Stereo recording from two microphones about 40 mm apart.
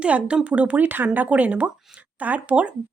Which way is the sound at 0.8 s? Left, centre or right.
Right.